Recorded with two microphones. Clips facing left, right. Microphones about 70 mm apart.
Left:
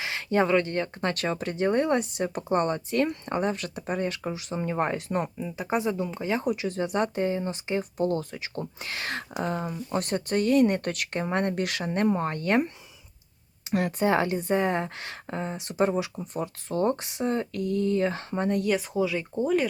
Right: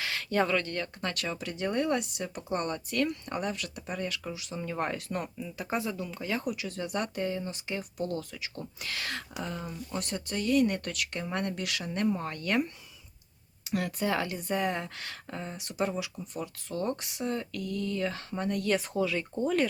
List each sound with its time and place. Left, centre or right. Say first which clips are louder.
0.0 s speech: left 4 dB; left
18.7 s speech: left 3 dB; centre